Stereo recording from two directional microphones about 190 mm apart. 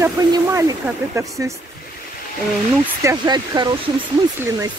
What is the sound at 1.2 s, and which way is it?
Speech, 15° right (ahead or behind).